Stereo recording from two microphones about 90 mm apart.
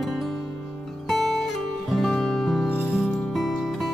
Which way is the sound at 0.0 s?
Centre (ahead or behind).